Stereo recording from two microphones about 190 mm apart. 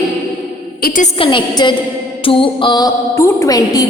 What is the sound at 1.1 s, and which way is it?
A woman's voice, 25° left (ahead or behind).